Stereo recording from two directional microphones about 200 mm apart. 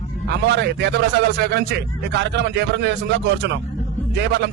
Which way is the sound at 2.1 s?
60° right (ahead or behind).